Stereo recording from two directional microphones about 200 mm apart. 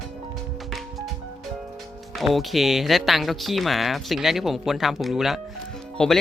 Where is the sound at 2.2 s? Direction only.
Centre (ahead or behind).